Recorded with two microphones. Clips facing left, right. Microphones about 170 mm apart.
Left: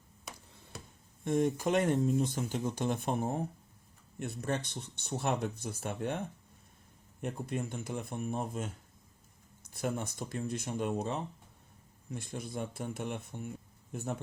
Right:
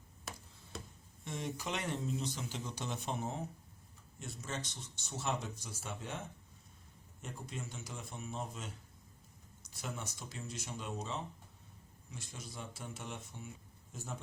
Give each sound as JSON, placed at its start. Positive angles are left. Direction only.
{"t": 0.3, "sound": "a sound", "side_deg": 0}
{"t": 1.2, "sound": "speech", "side_deg": 50}
{"t": 7.2, "sound": "speech", "side_deg": 60}